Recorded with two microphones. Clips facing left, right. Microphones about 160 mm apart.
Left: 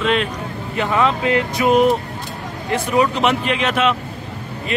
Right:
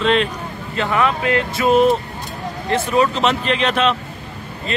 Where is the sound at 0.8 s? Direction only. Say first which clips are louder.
Left 1 dB; 20° left (ahead or behind).